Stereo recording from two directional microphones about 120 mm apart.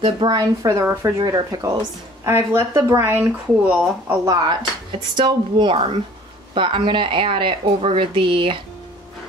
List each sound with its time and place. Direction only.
0.3 s speech: 30° right (ahead or behind); by 4.2 s 15° right (ahead or behind)
4.2 s speech: 35° right (ahead or behind)
5.1 s a woman's voice: 45° right (ahead or behind)